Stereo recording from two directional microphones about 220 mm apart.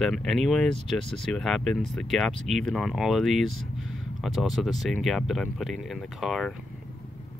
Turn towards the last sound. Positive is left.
turn(degrees=0)  # may be behind; listen again after turning